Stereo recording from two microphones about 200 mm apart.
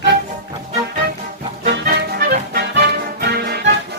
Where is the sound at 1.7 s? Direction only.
55° right (ahead or behind).